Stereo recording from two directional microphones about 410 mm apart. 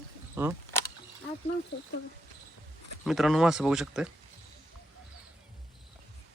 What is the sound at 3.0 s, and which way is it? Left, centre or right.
Speech, centre.